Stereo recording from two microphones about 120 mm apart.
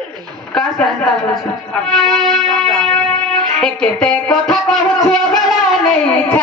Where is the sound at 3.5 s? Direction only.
5° left (ahead or behind).